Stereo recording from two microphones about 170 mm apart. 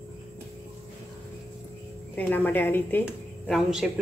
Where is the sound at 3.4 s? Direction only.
Centre (ahead or behind).